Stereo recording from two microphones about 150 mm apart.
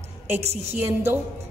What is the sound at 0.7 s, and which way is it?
Speech, 15° right (ahead or behind).